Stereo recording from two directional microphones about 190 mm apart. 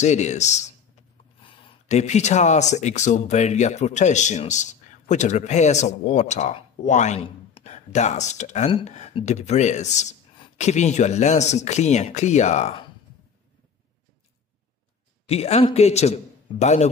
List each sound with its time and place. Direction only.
0.0 s speech: 35° left (ahead or behind)
15.2 s speech: 35° left (ahead or behind)